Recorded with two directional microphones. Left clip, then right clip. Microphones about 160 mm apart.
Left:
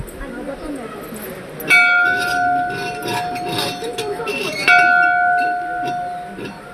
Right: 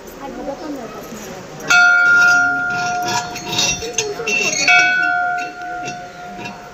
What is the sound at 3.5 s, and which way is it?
Chink, 90° left.